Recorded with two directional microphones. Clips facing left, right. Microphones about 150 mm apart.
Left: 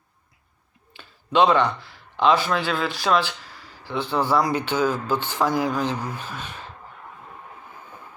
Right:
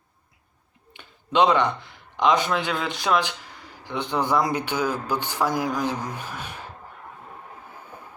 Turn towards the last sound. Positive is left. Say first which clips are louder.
# even
turn(degrees=-15)  # may be behind; listen again after turning